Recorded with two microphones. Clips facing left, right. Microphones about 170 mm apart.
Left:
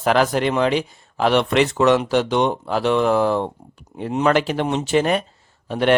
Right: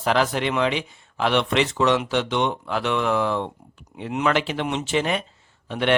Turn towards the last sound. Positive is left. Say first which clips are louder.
# left 4 dB
turn(degrees=40)  # may be behind; listen again after turning